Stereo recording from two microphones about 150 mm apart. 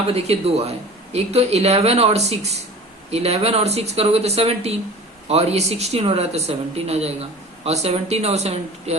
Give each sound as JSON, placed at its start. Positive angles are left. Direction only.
{"t": 0.1, "sound": "speech", "side_deg": -45}